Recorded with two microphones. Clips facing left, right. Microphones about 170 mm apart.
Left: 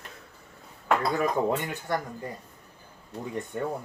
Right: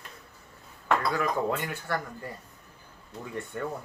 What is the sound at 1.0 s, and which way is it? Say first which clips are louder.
Speech: left 2 dB; 20° left (ahead or behind).